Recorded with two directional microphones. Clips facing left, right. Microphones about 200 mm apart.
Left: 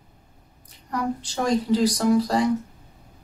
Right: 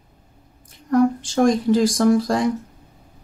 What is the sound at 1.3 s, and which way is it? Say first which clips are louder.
Speech: right 4 dB; 50° right (ahead or behind).